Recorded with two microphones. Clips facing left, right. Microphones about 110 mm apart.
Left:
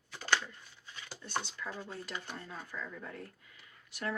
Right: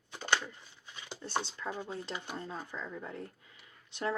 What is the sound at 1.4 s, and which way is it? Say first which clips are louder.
Speech: right 3 dB; 25° right (ahead or behind).